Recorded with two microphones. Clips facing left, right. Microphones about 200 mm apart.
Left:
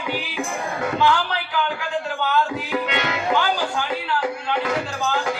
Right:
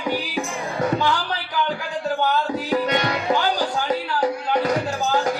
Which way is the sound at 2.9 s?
40° right (ahead or behind).